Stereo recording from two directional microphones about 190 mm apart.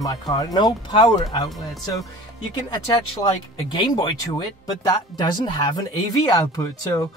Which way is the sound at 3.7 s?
25° left (ahead or behind).